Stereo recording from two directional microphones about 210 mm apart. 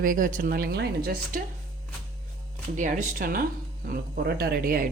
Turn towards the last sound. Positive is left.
turn(degrees=-45)  # may be behind; listen again after turning